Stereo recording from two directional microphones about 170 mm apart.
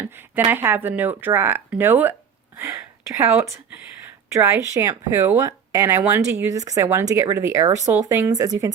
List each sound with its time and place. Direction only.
0.0 s speech: 10° right (ahead or behind)